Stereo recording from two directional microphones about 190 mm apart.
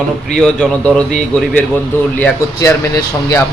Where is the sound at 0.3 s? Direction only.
5° left (ahead or behind).